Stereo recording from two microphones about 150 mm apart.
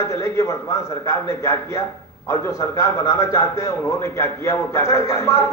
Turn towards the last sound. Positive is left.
turn(degrees=20)  # may be behind; listen again after turning